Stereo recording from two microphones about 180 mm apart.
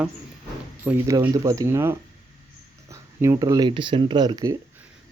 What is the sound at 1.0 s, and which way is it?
Speech, 20° right (ahead or behind).